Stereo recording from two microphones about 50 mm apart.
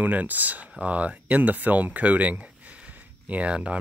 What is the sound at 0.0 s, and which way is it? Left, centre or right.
Speech, right.